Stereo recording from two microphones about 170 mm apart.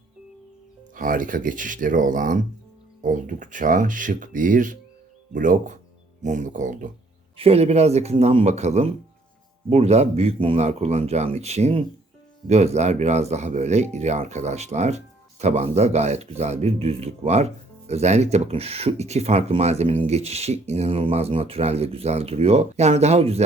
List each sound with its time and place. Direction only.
0.9 s speech: 55° right (ahead or behind)
7.3 s speech: 35° right (ahead or behind)